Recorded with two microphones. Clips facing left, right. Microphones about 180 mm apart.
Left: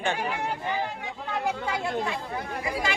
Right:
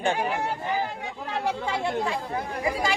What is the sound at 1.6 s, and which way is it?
Speech, 30° right (ahead or behind).